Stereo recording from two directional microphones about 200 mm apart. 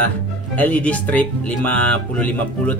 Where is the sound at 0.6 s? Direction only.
5° left (ahead or behind).